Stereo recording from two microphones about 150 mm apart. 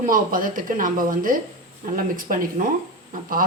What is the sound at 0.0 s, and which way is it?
Speech, 65° right (ahead or behind).